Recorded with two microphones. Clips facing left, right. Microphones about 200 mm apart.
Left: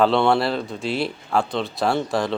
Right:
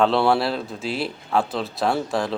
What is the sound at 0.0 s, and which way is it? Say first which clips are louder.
Speech: left 1 dB; centre (ahead or behind).